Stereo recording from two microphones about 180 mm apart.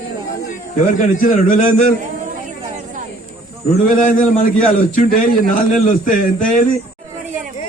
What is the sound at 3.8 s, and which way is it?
A man's voice, 50° left (ahead or behind).